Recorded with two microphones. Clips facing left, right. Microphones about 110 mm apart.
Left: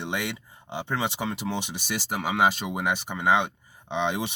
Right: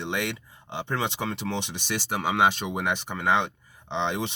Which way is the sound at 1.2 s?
10° left (ahead or behind).